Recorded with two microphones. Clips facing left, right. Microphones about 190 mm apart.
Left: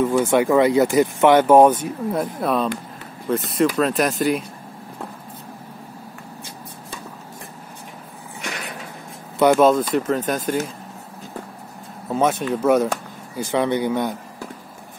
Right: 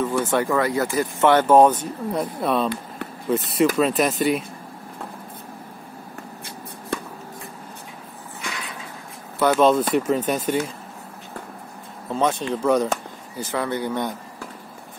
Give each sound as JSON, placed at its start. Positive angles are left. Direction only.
{"t": 0.0, "sound": "speech", "side_deg": 15}
{"t": 3.7, "sound": "speech", "side_deg": 0}
{"t": 6.9, "sound": "a sound", "side_deg": -65}
{"t": 9.4, "sound": "speech", "side_deg": 10}
{"t": 9.8, "sound": "speech", "side_deg": -5}
{"t": 12.1, "sound": "speech", "side_deg": 10}
{"t": 13.4, "sound": "speech", "side_deg": 20}